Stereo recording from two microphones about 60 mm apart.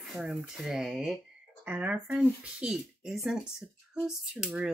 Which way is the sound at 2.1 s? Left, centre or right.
Centre.